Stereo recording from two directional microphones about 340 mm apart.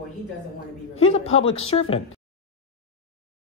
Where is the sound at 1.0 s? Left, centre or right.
Centre.